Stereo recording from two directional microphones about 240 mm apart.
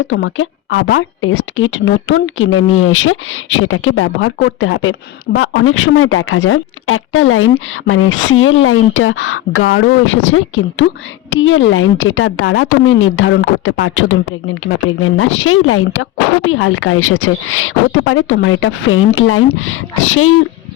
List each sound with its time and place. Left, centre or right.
0.1 s speech: left